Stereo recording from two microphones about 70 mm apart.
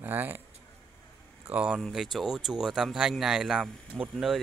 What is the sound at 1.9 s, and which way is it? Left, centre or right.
Speech, centre.